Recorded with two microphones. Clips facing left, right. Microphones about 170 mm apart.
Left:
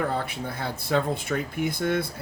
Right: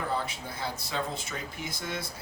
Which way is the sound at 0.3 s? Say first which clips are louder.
Left 5 dB; 60° left (ahead or behind).